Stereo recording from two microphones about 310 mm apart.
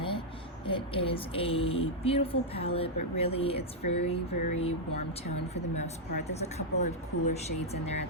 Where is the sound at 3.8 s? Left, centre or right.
Left.